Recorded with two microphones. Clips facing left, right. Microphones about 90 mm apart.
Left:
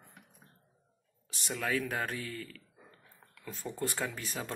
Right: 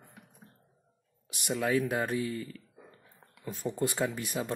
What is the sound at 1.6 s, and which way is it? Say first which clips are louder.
Speech: right 4 dB; 15° right (ahead or behind).